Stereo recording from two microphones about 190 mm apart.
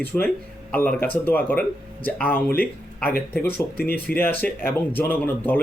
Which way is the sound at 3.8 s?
55° left (ahead or behind).